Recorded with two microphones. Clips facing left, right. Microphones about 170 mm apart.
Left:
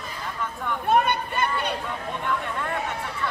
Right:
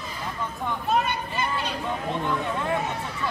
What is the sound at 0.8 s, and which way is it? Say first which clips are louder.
Speech: left 4 dB; 60° left (ahead or behind).